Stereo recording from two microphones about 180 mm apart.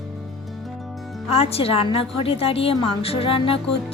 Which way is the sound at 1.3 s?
35° left (ahead or behind).